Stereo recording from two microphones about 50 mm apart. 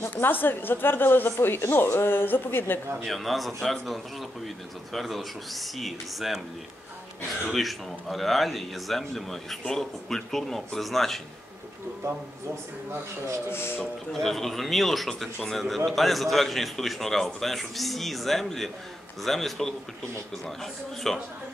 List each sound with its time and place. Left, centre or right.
0.1 s a woman's voice: left
3.0 s speech: centre
7.4 s speech: centre
13.5 s a woman's voice: left
14.1 s speech: centre
21.0 s speech: centre